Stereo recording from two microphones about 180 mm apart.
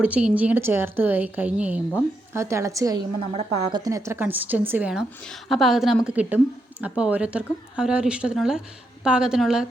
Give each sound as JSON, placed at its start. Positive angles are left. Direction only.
{"t": 0.0, "sound": "a woman's voice", "side_deg": -5}